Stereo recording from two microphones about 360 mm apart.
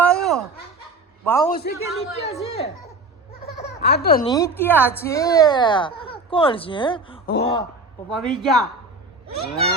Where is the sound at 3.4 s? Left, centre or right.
Left.